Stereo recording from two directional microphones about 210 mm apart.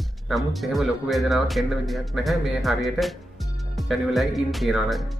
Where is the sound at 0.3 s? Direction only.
Centre (ahead or behind).